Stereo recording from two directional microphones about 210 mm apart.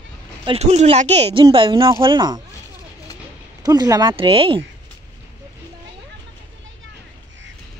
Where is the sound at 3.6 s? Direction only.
20° right (ahead or behind).